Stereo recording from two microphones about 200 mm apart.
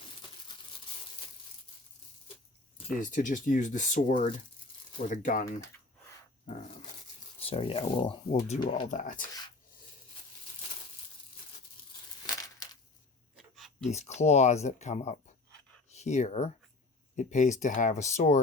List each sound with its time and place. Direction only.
3.0 s speech: 40° left (ahead or behind)
7.3 s speech: 30° left (ahead or behind)
8.9 s speech: 40° left (ahead or behind)
12.2 s a sound: 20° left (ahead or behind)
13.3 s a sound: centre (ahead or behind)
13.9 s speech: 35° left (ahead or behind)